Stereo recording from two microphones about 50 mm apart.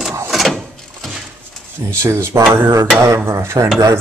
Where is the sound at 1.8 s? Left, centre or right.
Right.